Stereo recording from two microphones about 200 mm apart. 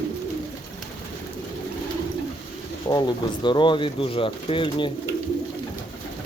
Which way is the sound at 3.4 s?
25° left (ahead or behind).